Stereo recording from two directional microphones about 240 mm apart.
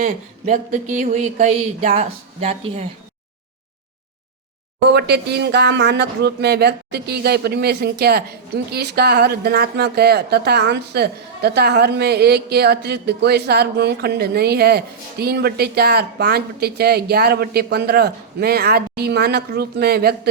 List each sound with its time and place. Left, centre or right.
0.0 s speech: right
4.9 s speech: right